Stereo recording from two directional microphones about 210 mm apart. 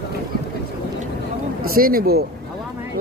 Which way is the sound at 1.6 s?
45° right (ahead or behind).